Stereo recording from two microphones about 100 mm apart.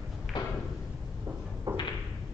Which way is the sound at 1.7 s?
30° right (ahead or behind).